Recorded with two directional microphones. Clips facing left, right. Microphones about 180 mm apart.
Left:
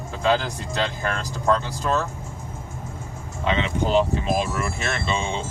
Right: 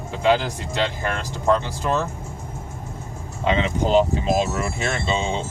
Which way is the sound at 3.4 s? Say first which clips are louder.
Right 2 dB; 35° right (ahead or behind).